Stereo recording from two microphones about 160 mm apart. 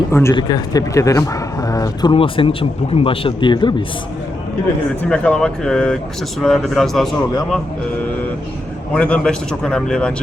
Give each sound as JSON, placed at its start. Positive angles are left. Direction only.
{"t": 0.1, "sound": "speech", "side_deg": 15}
{"t": 2.1, "sound": "speech", "side_deg": 35}
{"t": 5.0, "sound": "a man's voice", "side_deg": 5}
{"t": 8.9, "sound": "a man's voice", "side_deg": 10}